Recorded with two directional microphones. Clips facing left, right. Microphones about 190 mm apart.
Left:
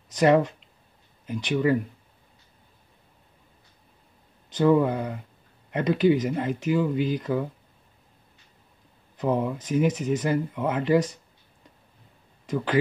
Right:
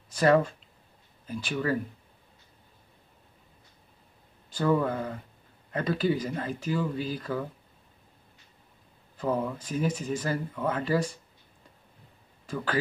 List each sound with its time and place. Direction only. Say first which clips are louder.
0.1 s speech: left 3 dB; 20° left (ahead or behind)
4.5 s speech: left 5 dB; 20° left (ahead or behind)
9.1 s speech: left 4 dB; 20° left (ahead or behind)